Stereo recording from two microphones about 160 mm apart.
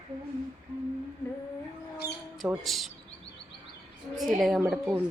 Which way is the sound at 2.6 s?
Centre (ahead or behind).